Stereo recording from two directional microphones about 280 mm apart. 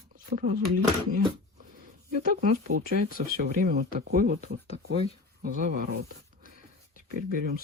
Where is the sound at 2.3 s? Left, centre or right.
Right.